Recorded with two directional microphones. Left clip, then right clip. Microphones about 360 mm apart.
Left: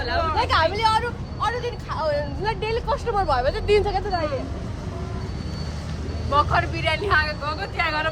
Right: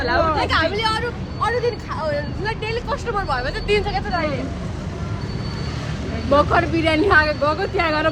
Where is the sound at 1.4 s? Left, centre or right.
Centre; by 4.2 s left.